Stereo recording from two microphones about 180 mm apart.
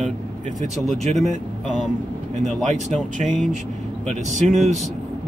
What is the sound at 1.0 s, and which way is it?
Speech, 40° right (ahead or behind).